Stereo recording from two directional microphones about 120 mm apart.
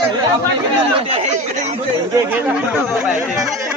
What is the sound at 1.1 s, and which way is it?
Speech, 65° right (ahead or behind).